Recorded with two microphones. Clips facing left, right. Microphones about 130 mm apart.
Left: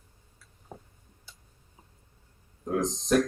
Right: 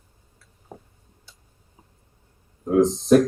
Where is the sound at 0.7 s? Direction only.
5° right (ahead or behind).